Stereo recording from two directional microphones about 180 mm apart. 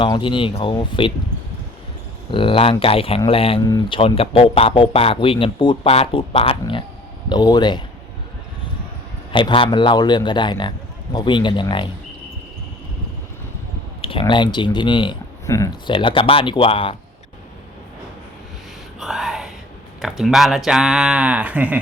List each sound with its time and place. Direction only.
0.0 s speech: 30° left (ahead or behind)
2.3 s speech: 30° left (ahead or behind)
9.3 s speech: 30° left (ahead or behind)
14.0 s speech: 30° left (ahead or behind)
15.4 s speech: 15° left (ahead or behind)
15.9 s speech: 30° left (ahead or behind)
18.9 s a sound: centre (ahead or behind)
20.0 s speech: centre (ahead or behind)